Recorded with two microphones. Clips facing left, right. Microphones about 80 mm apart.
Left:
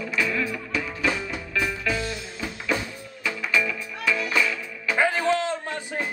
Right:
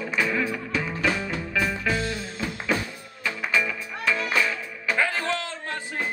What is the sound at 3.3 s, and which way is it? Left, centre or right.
Music, right.